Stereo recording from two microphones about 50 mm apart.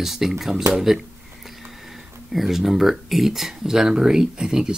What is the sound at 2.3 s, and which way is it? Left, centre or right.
Speech, centre.